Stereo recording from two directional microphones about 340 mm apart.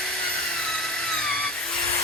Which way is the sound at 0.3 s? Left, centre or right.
Centre.